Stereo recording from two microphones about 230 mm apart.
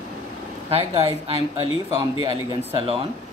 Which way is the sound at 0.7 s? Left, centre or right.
Right.